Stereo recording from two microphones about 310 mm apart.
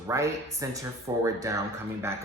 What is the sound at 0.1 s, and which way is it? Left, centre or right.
Speech, centre.